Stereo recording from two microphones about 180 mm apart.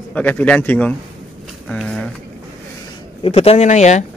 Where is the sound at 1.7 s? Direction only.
5° left (ahead or behind).